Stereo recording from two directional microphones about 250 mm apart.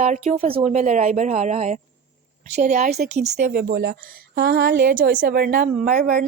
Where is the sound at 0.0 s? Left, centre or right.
Right.